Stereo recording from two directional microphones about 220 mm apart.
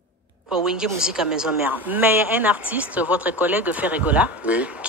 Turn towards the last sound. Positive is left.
turn(degrees=-5)  # may be behind; listen again after turning